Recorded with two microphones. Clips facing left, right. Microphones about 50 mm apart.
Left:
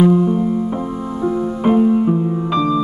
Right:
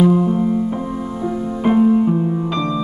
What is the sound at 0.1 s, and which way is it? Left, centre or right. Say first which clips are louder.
Music: left 1 dB; centre.